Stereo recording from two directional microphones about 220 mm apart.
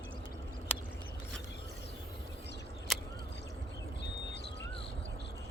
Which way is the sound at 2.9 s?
Centre (ahead or behind).